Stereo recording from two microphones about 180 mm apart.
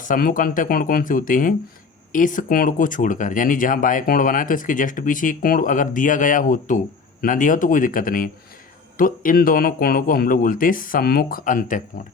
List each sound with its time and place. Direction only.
0.0 s speech: 50° left (ahead or behind)